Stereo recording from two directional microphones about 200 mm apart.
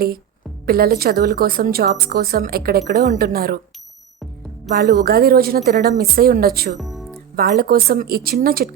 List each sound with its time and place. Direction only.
0.6 s a woman's voice: 50° right (ahead or behind)
4.7 s a woman's voice: 55° right (ahead or behind)
6.7 s music: centre (ahead or behind)
7.3 s a woman's voice: 50° right (ahead or behind)